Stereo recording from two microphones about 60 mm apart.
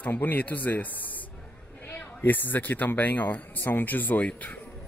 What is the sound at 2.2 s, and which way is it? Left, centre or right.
Speech, left.